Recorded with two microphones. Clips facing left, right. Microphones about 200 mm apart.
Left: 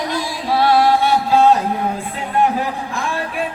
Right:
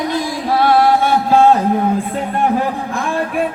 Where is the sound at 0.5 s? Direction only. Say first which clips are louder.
Right 1 dB; 50° right (ahead or behind).